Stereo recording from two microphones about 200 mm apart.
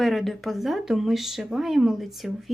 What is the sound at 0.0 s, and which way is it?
Speech, centre (ahead or behind).